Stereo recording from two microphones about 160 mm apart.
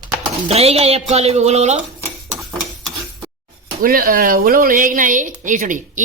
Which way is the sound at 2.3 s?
Centre (ahead or behind).